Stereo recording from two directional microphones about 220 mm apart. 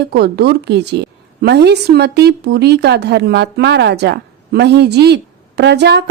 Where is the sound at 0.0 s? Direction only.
50° right (ahead or behind).